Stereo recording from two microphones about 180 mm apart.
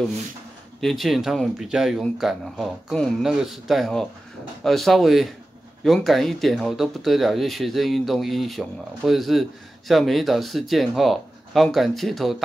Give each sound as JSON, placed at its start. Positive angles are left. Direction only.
{"t": 0.7, "sound": "speech", "side_deg": 0}